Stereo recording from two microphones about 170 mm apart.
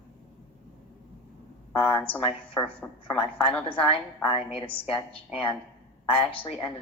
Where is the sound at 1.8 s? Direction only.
10° left (ahead or behind).